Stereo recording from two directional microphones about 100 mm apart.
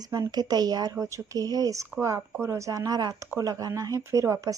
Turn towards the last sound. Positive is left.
turn(degrees=-30)  # may be behind; listen again after turning